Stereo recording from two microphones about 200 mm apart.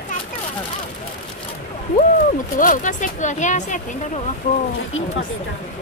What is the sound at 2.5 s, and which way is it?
Speech, 40° left (ahead or behind).